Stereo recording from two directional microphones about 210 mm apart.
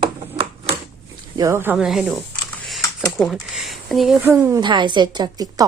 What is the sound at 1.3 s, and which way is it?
Speech, 15° right (ahead or behind).